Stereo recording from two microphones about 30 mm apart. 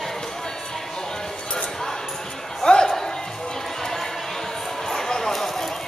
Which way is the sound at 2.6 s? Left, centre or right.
Left.